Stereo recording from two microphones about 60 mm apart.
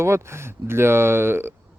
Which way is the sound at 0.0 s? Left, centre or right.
Right.